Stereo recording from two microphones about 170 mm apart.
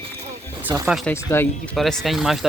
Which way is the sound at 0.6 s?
10° right (ahead or behind).